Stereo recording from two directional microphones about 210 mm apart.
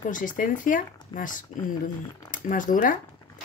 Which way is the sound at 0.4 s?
40° left (ahead or behind).